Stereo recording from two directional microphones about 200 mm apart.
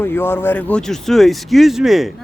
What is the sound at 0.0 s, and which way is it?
Speech, 10° left (ahead or behind).